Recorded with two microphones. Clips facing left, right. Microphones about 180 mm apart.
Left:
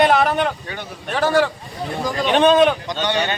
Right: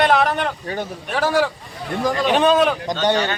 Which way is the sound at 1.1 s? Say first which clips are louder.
Left 2 dB; 10° right (ahead or behind).